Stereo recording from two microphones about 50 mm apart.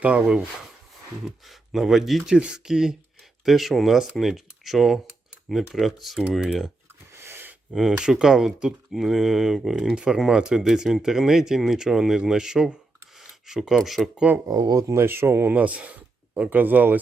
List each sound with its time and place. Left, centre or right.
0.0 s speech: right
1.5 s speech: centre
2.2 s speech: centre
7.2 s gasp: right
7.7 s speech: centre
9.9 s speech: right; by 14.1 s centre
14.3 s speech: right
14.8 s speech: right
15.0 s speech: right
15.5 s speech: right